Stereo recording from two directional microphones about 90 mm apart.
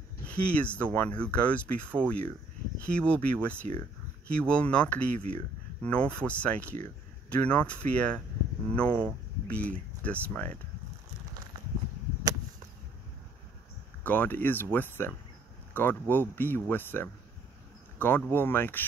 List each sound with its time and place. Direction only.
0.3 s speech: 15° left (ahead or behind)
12.3 s whip: 45° right (ahead or behind)
14.0 s speech: 20° left (ahead or behind)